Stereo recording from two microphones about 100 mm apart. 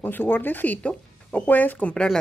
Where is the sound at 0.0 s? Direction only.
20° left (ahead or behind).